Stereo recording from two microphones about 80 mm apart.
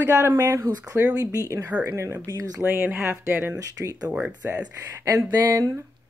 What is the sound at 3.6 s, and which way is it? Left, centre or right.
Speech, right.